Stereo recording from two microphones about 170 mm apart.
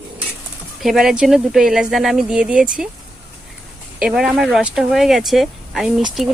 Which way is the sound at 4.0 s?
5° right (ahead or behind).